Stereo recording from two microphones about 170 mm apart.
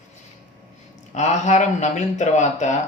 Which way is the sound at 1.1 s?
45° left (ahead or behind).